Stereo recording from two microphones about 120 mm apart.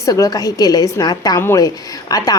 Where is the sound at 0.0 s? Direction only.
30° left (ahead or behind).